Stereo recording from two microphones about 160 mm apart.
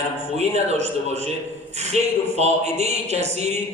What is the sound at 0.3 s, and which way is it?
A man's voice, 45° right (ahead or behind).